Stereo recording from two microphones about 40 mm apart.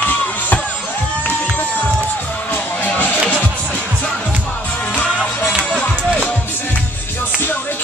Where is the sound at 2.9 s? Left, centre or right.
Left.